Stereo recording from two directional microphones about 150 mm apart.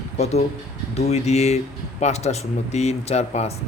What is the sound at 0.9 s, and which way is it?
A man's voice, 45° left (ahead or behind).